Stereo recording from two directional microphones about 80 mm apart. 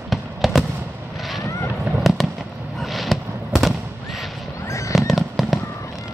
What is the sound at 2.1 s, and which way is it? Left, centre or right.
Fireworks, centre.